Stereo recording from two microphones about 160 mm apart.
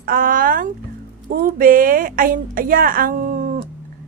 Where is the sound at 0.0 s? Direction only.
65° right (ahead or behind).